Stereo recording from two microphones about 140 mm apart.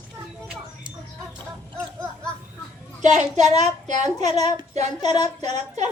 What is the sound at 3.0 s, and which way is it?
A woman's voice, 55° right (ahead or behind).